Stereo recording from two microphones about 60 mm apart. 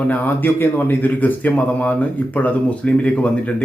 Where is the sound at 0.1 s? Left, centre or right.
Left.